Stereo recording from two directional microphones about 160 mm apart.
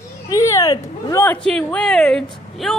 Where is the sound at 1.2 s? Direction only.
5° left (ahead or behind).